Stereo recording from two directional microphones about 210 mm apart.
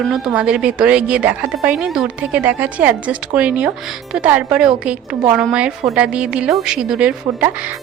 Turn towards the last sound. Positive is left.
turn(degrees=-5)  # may be behind; listen again after turning